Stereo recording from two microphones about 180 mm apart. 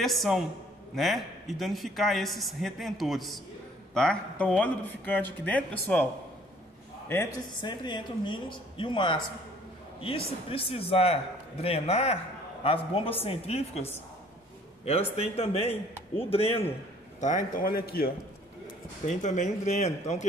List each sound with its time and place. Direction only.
0.0 s speech: centre (ahead or behind)
7.1 s a woman's voice: 15° left (ahead or behind); by 16.7 s 35° left (ahead or behind)
17.2 s a man's voice: 45° left (ahead or behind)
19.0 s a woman's voice: 40° left (ahead or behind)